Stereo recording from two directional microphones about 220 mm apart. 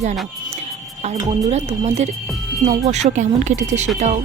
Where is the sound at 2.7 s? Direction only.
30° right (ahead or behind).